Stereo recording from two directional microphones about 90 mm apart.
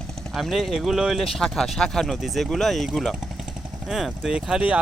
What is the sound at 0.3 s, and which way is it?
Speech, centre (ahead or behind).